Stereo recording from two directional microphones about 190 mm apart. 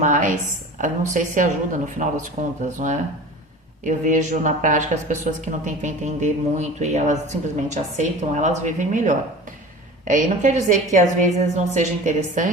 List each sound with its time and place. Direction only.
0.0 s speech: 40° right (ahead or behind)